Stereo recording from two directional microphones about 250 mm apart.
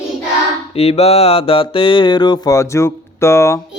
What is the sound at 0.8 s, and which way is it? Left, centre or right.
Mantra, left.